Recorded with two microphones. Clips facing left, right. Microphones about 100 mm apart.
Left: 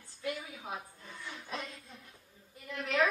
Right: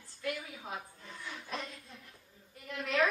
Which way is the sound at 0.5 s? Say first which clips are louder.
Left 1 dB; centre (ahead or behind).